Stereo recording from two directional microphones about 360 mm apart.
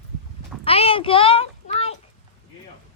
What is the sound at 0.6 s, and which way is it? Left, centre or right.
A child's voice, centre.